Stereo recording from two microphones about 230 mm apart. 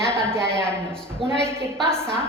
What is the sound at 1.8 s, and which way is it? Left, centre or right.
Speech, centre.